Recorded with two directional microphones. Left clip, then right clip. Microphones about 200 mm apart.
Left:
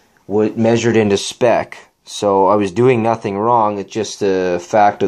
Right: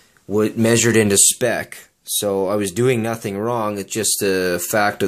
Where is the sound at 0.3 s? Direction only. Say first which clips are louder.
Left 3 dB; 40° right (ahead or behind).